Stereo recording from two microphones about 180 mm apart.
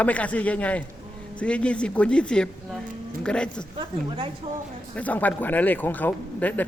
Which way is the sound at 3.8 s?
25° right (ahead or behind).